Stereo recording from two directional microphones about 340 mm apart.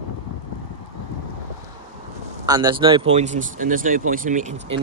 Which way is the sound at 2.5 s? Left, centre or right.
Centre.